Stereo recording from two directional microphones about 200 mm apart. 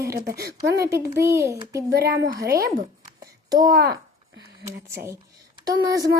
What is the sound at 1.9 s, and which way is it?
Speech, 50° right (ahead or behind).